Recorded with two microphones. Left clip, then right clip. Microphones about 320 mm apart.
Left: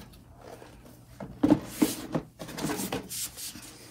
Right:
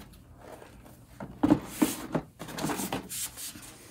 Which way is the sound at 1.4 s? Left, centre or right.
Centre.